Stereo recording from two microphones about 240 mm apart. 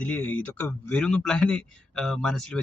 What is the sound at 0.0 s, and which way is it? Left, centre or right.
A man's voice, centre.